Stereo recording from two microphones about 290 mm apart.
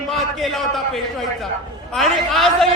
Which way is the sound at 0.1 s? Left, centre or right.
Centre.